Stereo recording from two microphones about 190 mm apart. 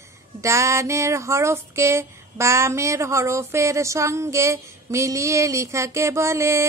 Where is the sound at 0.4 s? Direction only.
15° right (ahead or behind).